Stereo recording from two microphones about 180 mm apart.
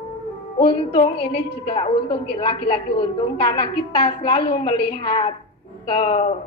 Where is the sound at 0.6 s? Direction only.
25° left (ahead or behind).